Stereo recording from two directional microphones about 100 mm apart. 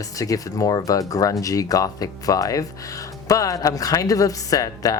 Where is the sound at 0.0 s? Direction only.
35° left (ahead or behind).